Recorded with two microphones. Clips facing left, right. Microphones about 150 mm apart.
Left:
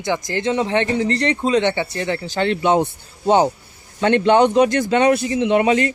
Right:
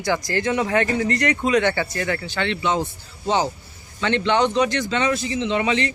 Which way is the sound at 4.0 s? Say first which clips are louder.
Left 6 dB; 50° left (ahead or behind).